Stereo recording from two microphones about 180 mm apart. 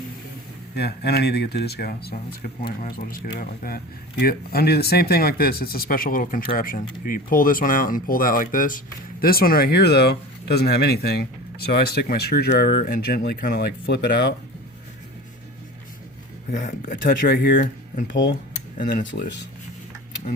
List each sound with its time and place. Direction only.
0.8 s speech: 65° left (ahead or behind)
16.5 s speech: 50° left (ahead or behind)